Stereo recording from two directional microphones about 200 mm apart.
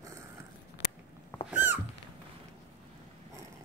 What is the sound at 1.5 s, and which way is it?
Dog, 10° right (ahead or behind).